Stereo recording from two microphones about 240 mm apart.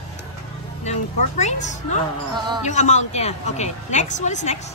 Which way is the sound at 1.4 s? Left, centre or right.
Left.